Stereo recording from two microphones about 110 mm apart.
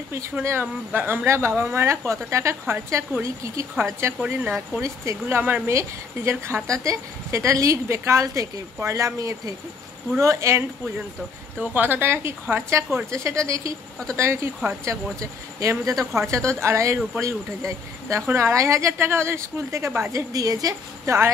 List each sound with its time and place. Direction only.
0.1 s speech: 25° right (ahead or behind)
4.8 s speech: 25° right (ahead or behind)
11.6 s speech: 15° right (ahead or behind)